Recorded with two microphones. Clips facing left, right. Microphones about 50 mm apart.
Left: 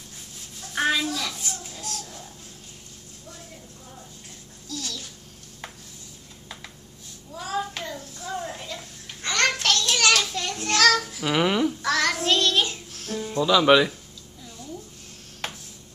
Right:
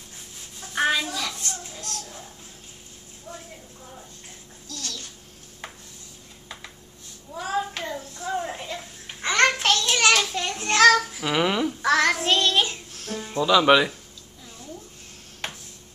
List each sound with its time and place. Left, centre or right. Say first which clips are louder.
0.6 s a sound: right 1 dB; centre
4.6 s babbling: left 2 dB; centre
7.3 s hands: right 2 dB; centre
7.8 s child singing: right 3 dB; centre
8.1 s a sound: right 5 dB; centre
11.8 s music: right 3 dB; centre
13.2 s speech: right 1 dB; centre
15.4 s tick-tock: even; centre